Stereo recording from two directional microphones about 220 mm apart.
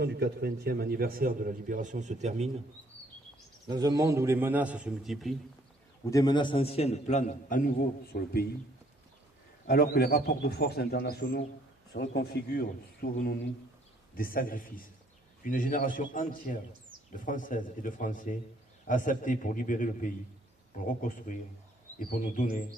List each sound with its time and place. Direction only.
0.0 s a man's voice: 50° right (ahead or behind); by 2.5 s 30° right (ahead or behind)
3.7 s a man's voice: 20° right (ahead or behind); by 5.3 s centre (ahead or behind)
6.1 s a man's voice: 15° left (ahead or behind); by 8.4 s 45° left (ahead or behind)
9.6 s a man's voice: 45° left (ahead or behind)